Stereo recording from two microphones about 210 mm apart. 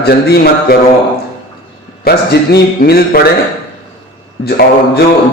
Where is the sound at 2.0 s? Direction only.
50° left (ahead or behind).